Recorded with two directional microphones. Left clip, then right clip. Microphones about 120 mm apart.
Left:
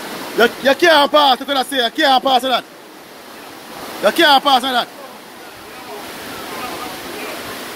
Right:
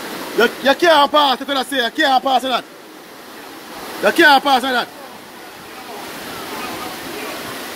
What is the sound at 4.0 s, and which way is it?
Speech, 15° left (ahead or behind).